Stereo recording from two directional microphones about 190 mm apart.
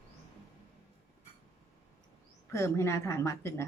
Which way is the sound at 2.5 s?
15° left (ahead or behind).